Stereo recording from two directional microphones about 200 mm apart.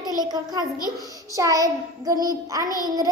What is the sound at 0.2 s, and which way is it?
A child's voice, 20° right (ahead or behind).